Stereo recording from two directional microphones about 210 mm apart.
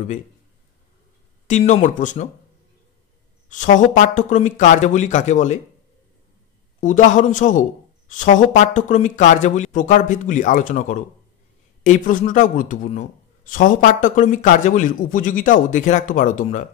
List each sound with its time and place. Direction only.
1.5 s a man's voice: 35° left (ahead or behind)
3.4 s a man's voice: 35° left (ahead or behind)
6.8 s a man's voice: 35° left (ahead or behind)